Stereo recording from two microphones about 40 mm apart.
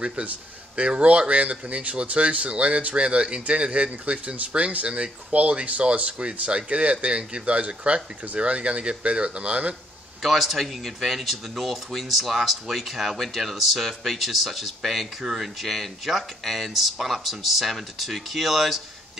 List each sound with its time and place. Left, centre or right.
0.2 s speech: right
10.2 s speech: centre